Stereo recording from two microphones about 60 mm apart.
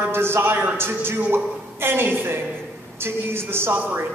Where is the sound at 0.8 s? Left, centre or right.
Right.